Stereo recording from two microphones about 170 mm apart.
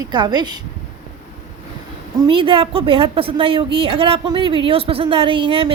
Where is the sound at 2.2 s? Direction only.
30° right (ahead or behind).